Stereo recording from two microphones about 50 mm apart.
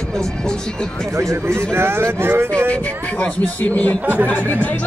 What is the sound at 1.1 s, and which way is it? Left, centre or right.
Speech, right.